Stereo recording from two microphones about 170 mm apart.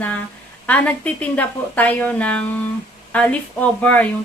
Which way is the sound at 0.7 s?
10° left (ahead or behind).